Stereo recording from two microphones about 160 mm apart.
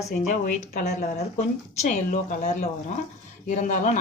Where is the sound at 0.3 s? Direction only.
55° left (ahead or behind).